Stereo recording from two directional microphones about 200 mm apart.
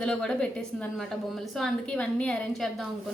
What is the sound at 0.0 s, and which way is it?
A woman's voice, 5° left (ahead or behind).